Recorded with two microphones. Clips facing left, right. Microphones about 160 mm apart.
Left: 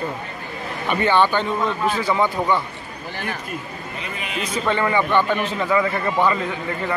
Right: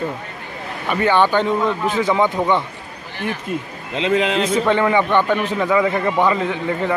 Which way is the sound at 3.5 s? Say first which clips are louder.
Right 5 dB; 90° right.